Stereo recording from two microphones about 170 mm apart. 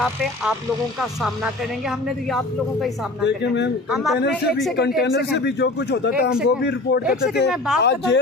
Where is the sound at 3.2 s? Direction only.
90° left.